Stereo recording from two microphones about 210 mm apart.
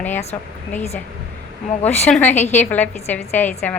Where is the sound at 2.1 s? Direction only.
10° left (ahead or behind).